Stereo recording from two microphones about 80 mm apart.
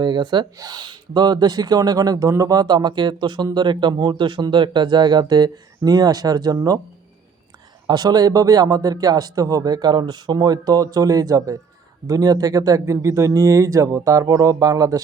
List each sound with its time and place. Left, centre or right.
0.0 s speech: right
7.9 s speech: right